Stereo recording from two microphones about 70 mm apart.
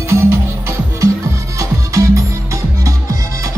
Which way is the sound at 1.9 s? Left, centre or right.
Right.